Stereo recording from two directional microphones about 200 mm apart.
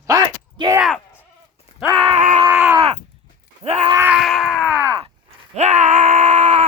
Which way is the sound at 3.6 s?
30° right (ahead or behind).